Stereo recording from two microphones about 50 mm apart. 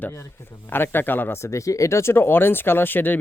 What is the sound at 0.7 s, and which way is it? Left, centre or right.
Speech, left.